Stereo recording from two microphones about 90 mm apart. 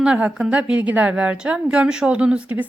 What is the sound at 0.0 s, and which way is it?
A woman's voice, 10° right (ahead or behind).